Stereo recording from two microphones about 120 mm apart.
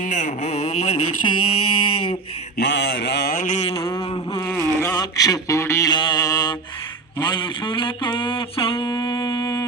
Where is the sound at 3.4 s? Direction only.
75° left (ahead or behind).